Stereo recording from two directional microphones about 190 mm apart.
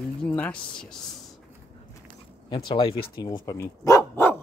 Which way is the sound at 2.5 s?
25° left (ahead or behind).